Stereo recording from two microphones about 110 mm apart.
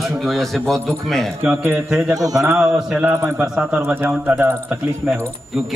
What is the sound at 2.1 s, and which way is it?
Speech, 30° right (ahead or behind).